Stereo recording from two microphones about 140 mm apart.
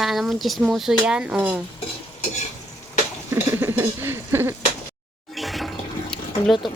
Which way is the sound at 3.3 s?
15° right (ahead or behind).